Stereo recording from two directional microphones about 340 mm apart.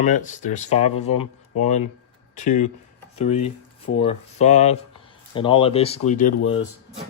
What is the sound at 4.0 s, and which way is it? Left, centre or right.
Speech, centre.